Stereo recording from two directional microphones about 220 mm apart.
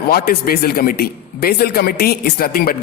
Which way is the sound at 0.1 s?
45° left (ahead or behind).